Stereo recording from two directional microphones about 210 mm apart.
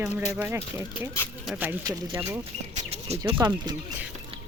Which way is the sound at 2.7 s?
30° right (ahead or behind).